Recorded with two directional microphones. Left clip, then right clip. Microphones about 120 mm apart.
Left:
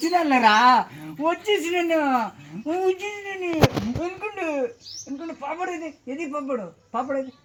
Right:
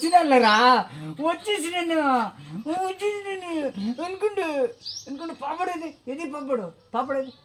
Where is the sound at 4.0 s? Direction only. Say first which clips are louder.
Right 3 dB; 35° right (ahead or behind).